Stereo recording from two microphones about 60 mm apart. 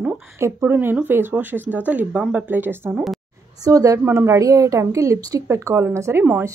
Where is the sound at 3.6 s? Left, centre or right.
Right.